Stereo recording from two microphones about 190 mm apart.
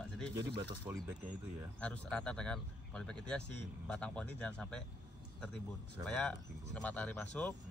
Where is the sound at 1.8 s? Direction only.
5° left (ahead or behind).